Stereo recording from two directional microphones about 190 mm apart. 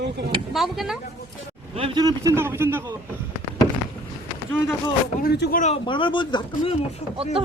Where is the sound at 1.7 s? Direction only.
25° right (ahead or behind).